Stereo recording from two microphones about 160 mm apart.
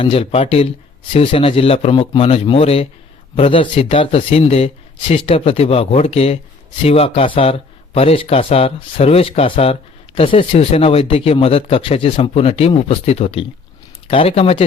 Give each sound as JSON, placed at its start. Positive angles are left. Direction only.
{"t": 0.0, "sound": "speech", "side_deg": 35}